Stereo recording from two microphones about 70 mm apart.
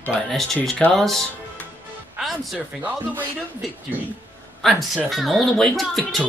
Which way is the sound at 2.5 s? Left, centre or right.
Right.